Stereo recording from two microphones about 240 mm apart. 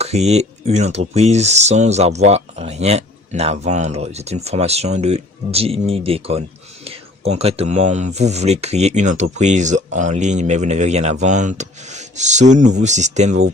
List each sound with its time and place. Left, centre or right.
0.0 s speech: right